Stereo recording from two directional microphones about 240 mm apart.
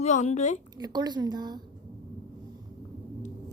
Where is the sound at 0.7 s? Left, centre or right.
Centre.